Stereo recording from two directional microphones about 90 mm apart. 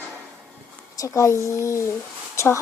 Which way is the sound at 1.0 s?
35° left (ahead or behind).